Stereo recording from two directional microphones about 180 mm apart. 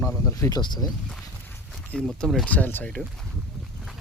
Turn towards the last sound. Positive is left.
turn(degrees=5)  # may be behind; listen again after turning